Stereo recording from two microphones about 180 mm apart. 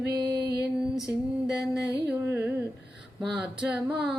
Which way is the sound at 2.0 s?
10° right (ahead or behind).